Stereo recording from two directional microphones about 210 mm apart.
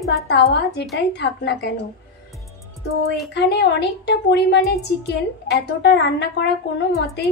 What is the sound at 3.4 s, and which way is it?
A woman's voice, 50° left (ahead or behind).